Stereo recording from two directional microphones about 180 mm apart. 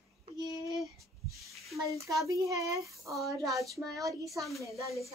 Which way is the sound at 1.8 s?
15° right (ahead or behind).